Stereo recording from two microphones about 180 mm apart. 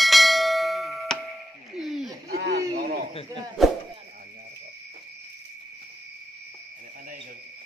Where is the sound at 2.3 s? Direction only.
60° right (ahead or behind).